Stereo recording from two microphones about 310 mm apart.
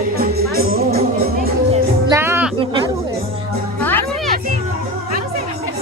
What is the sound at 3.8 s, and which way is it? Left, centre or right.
Music, centre.